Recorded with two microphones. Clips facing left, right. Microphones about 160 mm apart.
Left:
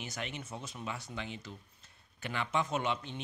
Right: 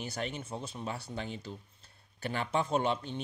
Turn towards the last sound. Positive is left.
turn(degrees=-35)  # may be behind; listen again after turning